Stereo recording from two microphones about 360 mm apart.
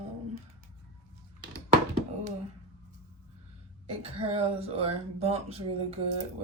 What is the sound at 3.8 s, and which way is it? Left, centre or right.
Speech, centre.